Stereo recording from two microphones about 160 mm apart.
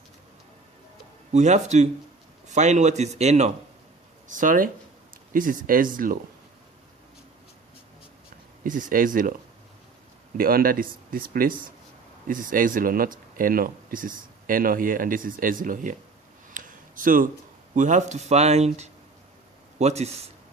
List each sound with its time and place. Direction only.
1.3 s speech: 45° right (ahead or behind)
4.3 s speech: 55° right (ahead or behind)
8.6 s speech: 60° right (ahead or behind)
10.3 s speech: 65° right (ahead or behind)
16.6 s a sound: 55° right (ahead or behind)
17.7 s speech: 50° right (ahead or behind)